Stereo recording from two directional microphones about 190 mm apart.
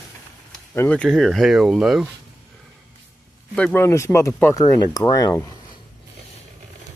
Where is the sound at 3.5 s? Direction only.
10° left (ahead or behind).